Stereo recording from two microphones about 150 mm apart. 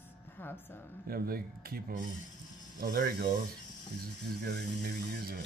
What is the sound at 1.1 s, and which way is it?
A man's voice, 90° right.